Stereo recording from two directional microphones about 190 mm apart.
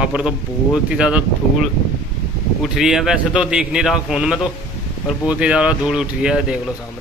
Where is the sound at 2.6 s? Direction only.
Centre (ahead or behind).